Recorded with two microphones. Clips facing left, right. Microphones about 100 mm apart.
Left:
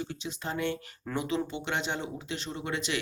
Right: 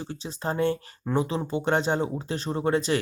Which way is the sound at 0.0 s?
35° right (ahead or behind).